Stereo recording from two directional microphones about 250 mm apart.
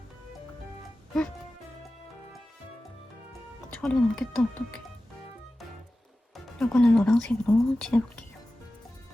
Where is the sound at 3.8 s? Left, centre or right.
Centre.